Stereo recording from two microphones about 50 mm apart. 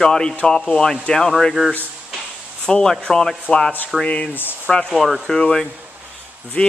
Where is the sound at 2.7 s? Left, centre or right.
Centre.